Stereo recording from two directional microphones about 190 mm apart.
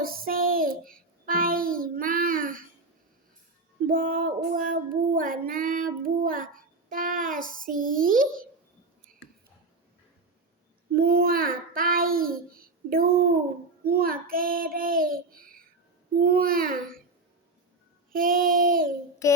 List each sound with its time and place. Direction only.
0.0 s child singing: 50° right (ahead or behind)
3.8 s child singing: 45° right (ahead or behind)
10.9 s child singing: 50° right (ahead or behind)
18.1 s child singing: 45° right (ahead or behind)
19.2 s child singing: 15° left (ahead or behind)